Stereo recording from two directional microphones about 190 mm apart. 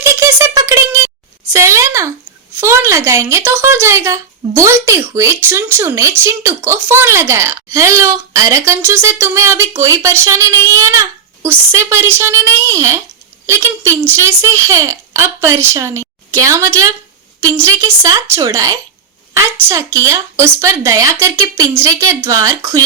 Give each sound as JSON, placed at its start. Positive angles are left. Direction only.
{"t": 0.0, "sound": "a sound", "side_deg": -15}
{"t": 2.6, "sound": "speech", "side_deg": -15}
{"t": 14.2, "sound": "speech", "side_deg": -15}
{"t": 20.1, "sound": "speech", "side_deg": -15}